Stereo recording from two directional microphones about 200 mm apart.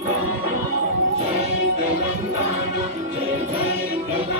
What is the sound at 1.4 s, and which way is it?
Music, 40° right (ahead or behind).